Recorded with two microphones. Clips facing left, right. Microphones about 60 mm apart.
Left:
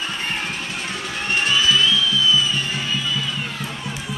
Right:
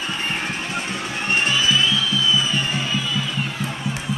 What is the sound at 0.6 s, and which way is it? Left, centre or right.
Music, right.